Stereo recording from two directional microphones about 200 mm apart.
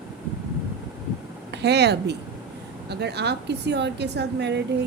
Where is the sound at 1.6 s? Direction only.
55° right (ahead or behind).